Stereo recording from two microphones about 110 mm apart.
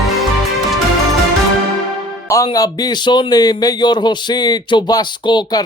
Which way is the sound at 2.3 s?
35° left (ahead or behind).